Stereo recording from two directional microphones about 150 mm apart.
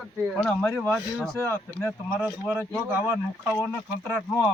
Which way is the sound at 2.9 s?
15° right (ahead or behind).